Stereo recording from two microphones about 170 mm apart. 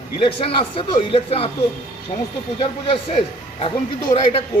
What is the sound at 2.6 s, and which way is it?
A man's voice, 30° left (ahead or behind).